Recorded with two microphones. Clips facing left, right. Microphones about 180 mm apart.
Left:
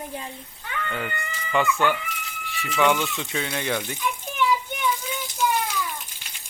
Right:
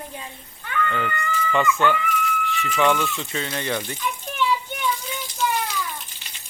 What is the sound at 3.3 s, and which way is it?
Water, 10° left (ahead or behind).